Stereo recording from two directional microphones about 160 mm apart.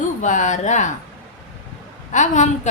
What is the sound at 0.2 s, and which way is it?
Speech, 50° left (ahead or behind).